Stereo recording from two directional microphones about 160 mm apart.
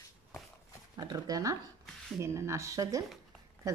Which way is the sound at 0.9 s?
25° right (ahead or behind).